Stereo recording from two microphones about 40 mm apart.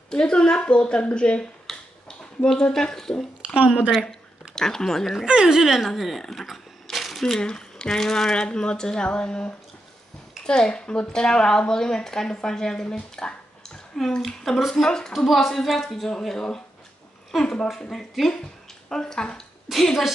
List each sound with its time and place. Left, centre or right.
0.1 s speech: left
4.1 s a sound: centre
5.2 s speech: centre
5.8 s speech: centre
6.5 s a sound: centre
7.3 s a woman's voice: centre
13.9 s a woman's voice: centre
14.7 s a woman's voice: centre
15.1 s a woman's voice: centre